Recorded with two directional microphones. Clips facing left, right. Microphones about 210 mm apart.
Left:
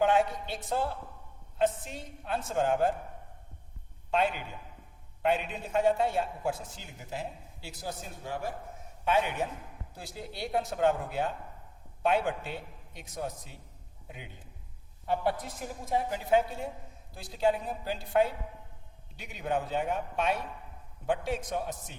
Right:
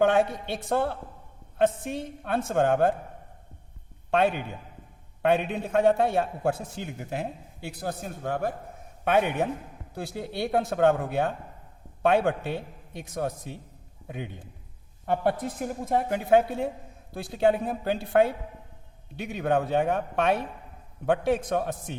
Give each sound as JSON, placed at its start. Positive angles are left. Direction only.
{"t": 0.0, "sound": "a man's voice", "side_deg": -65}
{"t": 4.1, "sound": "a man's voice", "side_deg": -60}